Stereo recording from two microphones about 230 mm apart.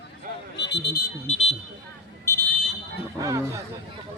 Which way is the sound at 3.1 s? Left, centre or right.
Centre.